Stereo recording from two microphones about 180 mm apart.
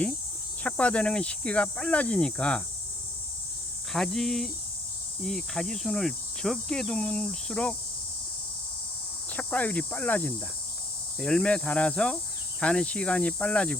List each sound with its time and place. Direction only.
0.6 s cricket: 5° left (ahead or behind)
3.9 s cricket: centre (ahead or behind)
9.3 s cricket: 10° left (ahead or behind)